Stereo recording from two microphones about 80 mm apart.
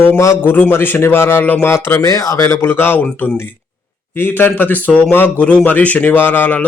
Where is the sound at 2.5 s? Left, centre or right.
Left.